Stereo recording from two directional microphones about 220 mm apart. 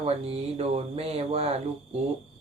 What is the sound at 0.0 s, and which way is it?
Speech, 25° right (ahead or behind).